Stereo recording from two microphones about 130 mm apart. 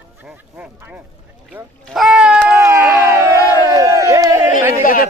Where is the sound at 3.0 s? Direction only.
20° right (ahead or behind).